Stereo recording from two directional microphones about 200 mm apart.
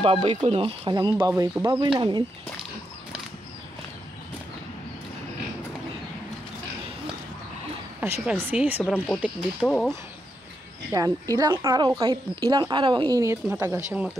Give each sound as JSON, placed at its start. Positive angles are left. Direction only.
{"t": 0.0, "sound": "a woman's voice", "side_deg": -30}
{"t": 8.0, "sound": "a woman's voice", "side_deg": -10}
{"t": 8.9, "sound": "speech", "side_deg": 5}
{"t": 10.9, "sound": "speech", "side_deg": -15}